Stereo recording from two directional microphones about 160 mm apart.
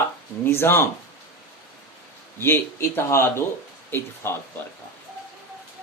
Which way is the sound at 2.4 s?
15° left (ahead or behind).